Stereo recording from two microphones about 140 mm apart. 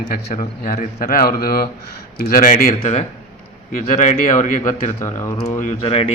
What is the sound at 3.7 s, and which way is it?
Speech, 90° left.